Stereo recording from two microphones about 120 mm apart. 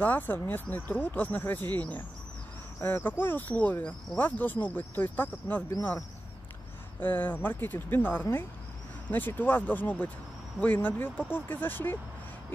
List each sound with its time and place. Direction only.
0.0 s speech: 15° left (ahead or behind)
7.0 s speech: 15° left (ahead or behind)